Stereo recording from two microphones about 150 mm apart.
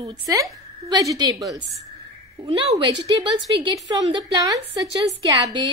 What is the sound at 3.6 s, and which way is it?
A woman's voice, 30° right (ahead or behind).